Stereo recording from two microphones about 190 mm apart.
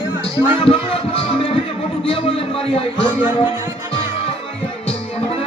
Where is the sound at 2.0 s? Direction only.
30° left (ahead or behind).